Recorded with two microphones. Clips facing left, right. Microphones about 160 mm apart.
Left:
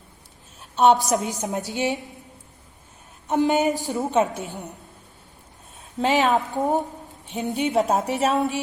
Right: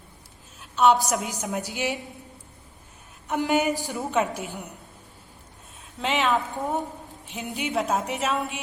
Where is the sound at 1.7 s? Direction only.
20° left (ahead or behind).